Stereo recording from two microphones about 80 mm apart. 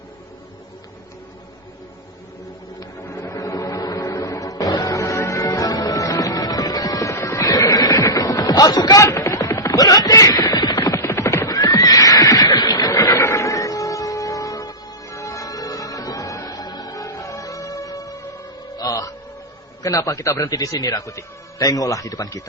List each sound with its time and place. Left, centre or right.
3.1 s music: left
7.4 s music: left
9.0 s a sound: left
10.9 s music: left
11.4 s horse: left
13.1 s music: left
19.8 s a man's voice: left